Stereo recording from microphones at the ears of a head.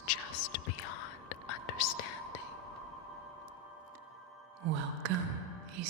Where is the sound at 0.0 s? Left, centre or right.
Left.